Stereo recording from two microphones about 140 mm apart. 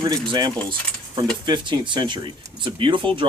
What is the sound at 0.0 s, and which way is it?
Speech, 30° right (ahead or behind).